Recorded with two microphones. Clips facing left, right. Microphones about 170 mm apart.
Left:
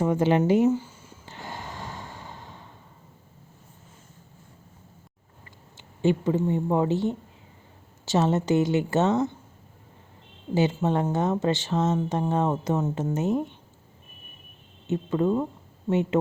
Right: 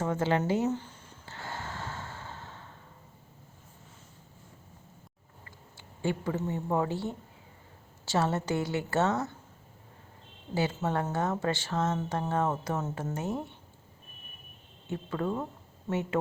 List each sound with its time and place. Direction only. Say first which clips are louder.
0.0 s a sound: left 7 dB; 15° left (ahead or behind)
5.7 s speech: left 8 dB; 20° left (ahead or behind)
10.5 s speech: left 6 dB; 20° left (ahead or behind)
14.8 s speech: left 8 dB; 20° left (ahead or behind)